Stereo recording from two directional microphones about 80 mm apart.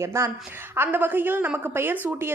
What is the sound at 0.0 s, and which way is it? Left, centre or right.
Speech, right.